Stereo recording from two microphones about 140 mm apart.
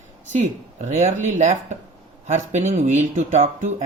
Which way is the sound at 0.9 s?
60° right (ahead or behind).